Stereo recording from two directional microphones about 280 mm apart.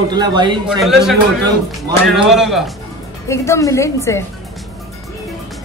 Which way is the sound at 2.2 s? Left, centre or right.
Centre.